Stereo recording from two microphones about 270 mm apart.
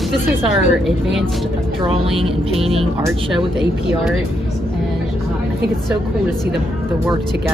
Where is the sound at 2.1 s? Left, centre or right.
Centre.